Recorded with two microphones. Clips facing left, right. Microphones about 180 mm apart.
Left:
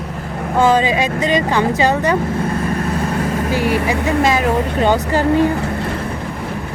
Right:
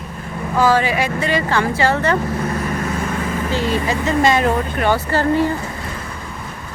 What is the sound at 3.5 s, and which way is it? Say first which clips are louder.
Speech: left 2 dB; 10° left (ahead or behind).